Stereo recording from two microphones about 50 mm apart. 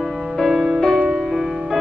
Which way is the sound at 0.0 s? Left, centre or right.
Centre.